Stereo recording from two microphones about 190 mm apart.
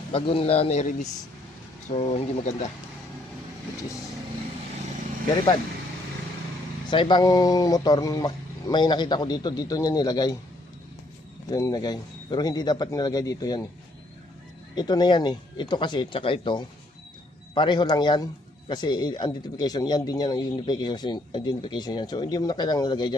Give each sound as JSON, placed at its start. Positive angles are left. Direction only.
{"t": 0.1, "sound": "a man's voice", "side_deg": 30}
{"t": 6.9, "sound": "speech", "side_deg": 25}
{"t": 11.5, "sound": "speech", "side_deg": 20}
{"t": 14.8, "sound": "speech", "side_deg": 20}